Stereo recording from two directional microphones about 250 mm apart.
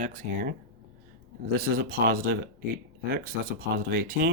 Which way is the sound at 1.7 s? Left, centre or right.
Right.